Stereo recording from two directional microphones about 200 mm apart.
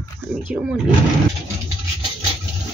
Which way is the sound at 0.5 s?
Centre (ahead or behind).